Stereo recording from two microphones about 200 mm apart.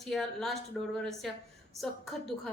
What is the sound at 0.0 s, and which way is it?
Speech, centre (ahead or behind).